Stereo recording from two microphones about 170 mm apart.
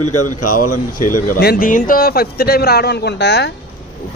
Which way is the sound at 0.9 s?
65° left (ahead or behind).